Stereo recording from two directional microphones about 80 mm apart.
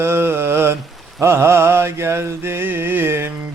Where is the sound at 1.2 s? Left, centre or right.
Right.